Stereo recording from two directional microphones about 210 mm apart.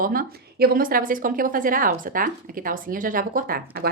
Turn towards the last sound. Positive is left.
turn(degrees=-45)  # may be behind; listen again after turning